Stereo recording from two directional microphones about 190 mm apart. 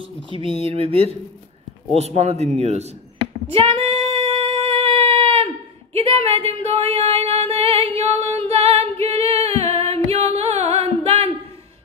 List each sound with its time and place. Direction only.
0.3 s a sound: 30° left (ahead or behind)
0.7 s a man's voice: 30° right (ahead or behind)
3.5 s female singing: 30° right (ahead or behind)
5.9 s singing: 30° right (ahead or behind)
9.0 s music: 30° right (ahead or behind)